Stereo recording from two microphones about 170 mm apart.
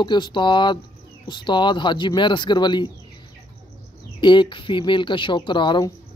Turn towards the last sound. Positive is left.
turn(degrees=25)  # may be behind; listen again after turning